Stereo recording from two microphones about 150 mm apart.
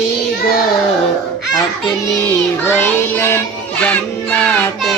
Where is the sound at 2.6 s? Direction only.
15° left (ahead or behind).